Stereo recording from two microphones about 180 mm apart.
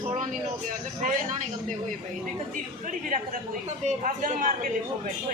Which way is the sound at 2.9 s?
45° right (ahead or behind).